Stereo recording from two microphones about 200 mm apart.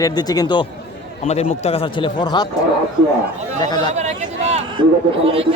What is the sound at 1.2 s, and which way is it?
A man's voice, 35° left (ahead or behind).